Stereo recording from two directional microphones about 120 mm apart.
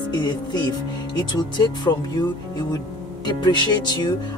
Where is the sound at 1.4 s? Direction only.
35° left (ahead or behind).